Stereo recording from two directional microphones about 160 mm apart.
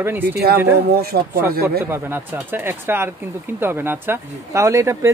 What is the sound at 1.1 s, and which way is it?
Speech, 85° right.